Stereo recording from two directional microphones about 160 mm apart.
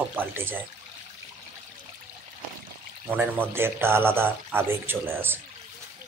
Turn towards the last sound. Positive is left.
turn(degrees=-15)  # may be behind; listen again after turning